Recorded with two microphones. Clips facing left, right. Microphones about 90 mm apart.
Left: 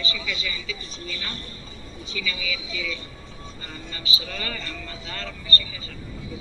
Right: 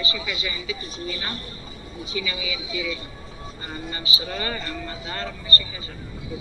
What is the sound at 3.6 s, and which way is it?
Vehicle, 35° right (ahead or behind).